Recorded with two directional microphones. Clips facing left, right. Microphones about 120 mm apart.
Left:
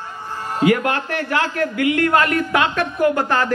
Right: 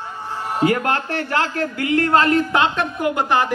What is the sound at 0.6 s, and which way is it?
A man's voice, 35° right (ahead or behind).